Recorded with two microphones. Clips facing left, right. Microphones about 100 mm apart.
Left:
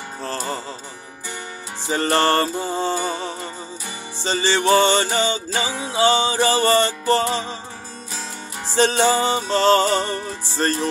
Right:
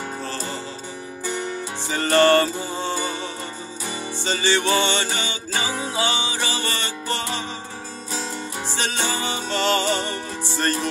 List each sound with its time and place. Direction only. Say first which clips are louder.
1.9 s music: right 2 dB; 35° left (ahead or behind)
8.7 s music: left 10 dB; 35° left (ahead or behind)